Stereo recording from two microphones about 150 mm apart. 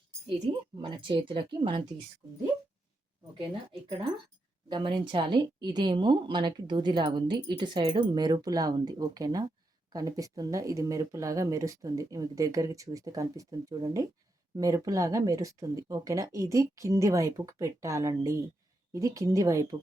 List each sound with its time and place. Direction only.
0.8 s a woman's voice: 30° right (ahead or behind)
3.3 s a woman's voice: 35° right (ahead or behind)